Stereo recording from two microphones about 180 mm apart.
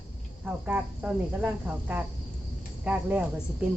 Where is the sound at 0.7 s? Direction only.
10° right (ahead or behind).